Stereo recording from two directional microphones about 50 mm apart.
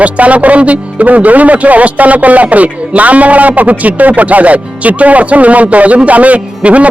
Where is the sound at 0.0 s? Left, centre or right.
Right.